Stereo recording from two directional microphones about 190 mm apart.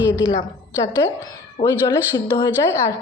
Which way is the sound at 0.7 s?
10° right (ahead or behind).